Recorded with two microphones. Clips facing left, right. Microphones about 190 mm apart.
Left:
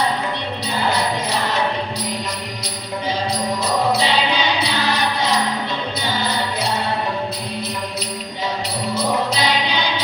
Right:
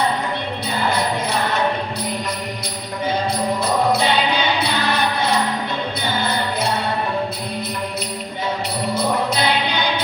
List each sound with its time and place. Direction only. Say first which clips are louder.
3.9 s music: right 1 dB; 55° right (ahead or behind)
9.0 s music: even; 55° right (ahead or behind)